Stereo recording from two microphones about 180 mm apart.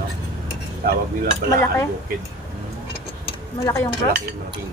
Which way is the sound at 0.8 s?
55° right (ahead or behind).